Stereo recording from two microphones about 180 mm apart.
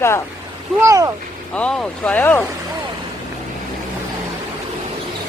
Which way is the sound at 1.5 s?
5° left (ahead or behind).